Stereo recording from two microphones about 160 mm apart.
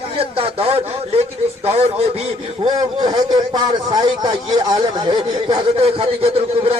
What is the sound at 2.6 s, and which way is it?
A man's voice, 25° right (ahead or behind).